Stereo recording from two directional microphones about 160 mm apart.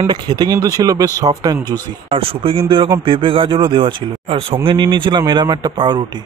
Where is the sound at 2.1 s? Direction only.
35° right (ahead or behind).